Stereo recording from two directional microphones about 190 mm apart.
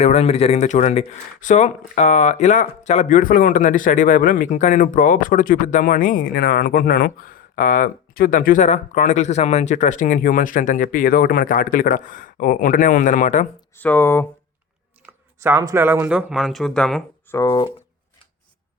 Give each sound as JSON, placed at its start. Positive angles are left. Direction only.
{"t": 0.0, "sound": "speech", "side_deg": 35}
{"t": 13.7, "sound": "speech", "side_deg": 10}
{"t": 15.0, "sound": "speech", "side_deg": -10}
{"t": 17.3, "sound": "speech", "side_deg": 20}